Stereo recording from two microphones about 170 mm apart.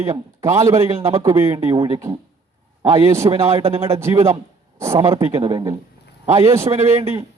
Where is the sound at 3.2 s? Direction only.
35° right (ahead or behind).